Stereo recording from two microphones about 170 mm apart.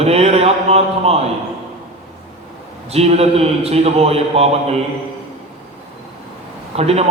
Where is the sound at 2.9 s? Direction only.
35° right (ahead or behind).